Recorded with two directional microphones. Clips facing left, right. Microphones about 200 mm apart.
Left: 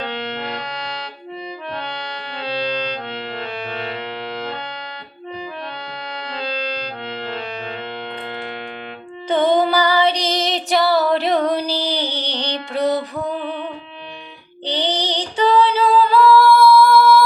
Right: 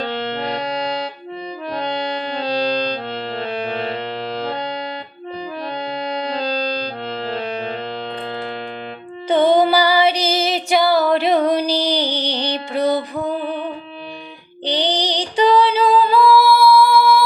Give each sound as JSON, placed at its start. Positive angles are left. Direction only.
{"t": 2.3, "sound": "music", "side_deg": -40}
{"t": 6.3, "sound": "music", "side_deg": -40}
{"t": 9.3, "sound": "female singing", "side_deg": -10}
{"t": 12.7, "sound": "music", "side_deg": 0}
{"t": 13.4, "sound": "music", "side_deg": -35}
{"t": 14.6, "sound": "female singing", "side_deg": -15}